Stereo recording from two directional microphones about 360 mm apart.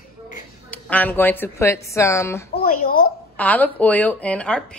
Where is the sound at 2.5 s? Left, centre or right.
Left.